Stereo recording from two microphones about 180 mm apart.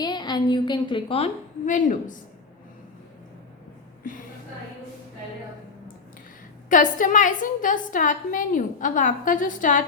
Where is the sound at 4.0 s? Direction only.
45° left (ahead or behind).